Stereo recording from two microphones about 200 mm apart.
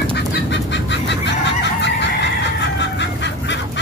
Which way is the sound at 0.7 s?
60° left (ahead or behind).